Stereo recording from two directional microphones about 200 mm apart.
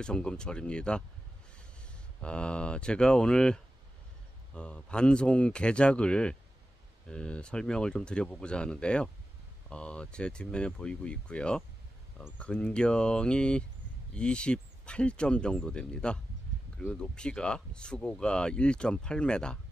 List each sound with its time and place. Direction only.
0.0 s speech: 5° left (ahead or behind)
2.2 s speech: 5° left (ahead or behind)